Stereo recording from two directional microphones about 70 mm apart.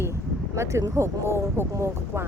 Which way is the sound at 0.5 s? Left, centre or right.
Right.